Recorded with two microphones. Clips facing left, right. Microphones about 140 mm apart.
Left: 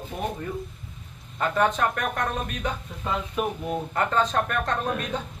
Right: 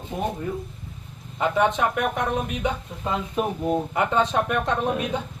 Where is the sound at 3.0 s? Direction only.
25° right (ahead or behind).